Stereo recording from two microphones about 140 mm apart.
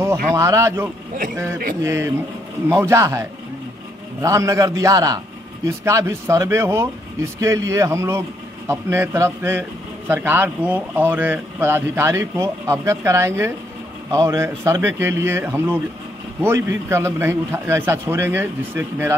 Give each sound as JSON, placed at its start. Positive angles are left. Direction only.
{"t": 0.4, "sound": "a man's voice", "side_deg": -20}